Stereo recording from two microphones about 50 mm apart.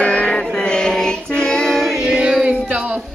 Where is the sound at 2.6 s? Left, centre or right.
Right.